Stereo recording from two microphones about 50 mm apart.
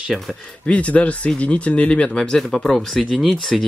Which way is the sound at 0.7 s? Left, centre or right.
Left.